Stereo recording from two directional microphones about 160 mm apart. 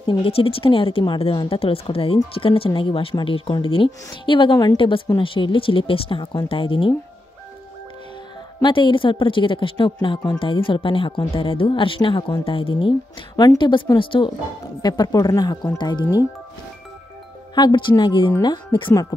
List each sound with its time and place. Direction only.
0.0 s speech: 35° left (ahead or behind)
8.6 s speech: 30° left (ahead or behind)
17.6 s speech: 25° left (ahead or behind)